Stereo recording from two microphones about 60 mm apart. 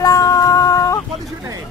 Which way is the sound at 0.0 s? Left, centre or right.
Left.